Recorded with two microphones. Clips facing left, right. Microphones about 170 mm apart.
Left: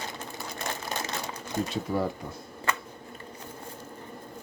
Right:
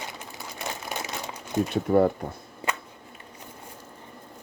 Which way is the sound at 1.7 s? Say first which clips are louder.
Right 11 dB; 60° right (ahead or behind).